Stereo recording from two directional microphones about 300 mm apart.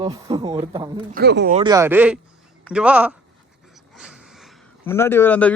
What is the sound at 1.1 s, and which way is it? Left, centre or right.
Speech, right.